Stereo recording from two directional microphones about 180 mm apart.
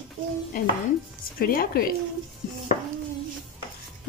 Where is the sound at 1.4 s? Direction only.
55° left (ahead or behind).